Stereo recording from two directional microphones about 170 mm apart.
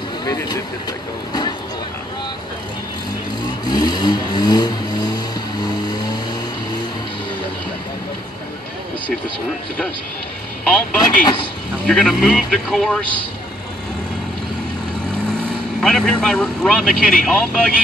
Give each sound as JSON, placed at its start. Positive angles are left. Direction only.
{"t": 0.2, "sound": "speech", "side_deg": 20}
{"t": 3.6, "sound": "vehicle", "side_deg": 25}
{"t": 11.0, "sound": "speech", "side_deg": 25}
{"t": 11.8, "sound": "speech", "side_deg": 0}
{"t": 15.8, "sound": "speech", "side_deg": 0}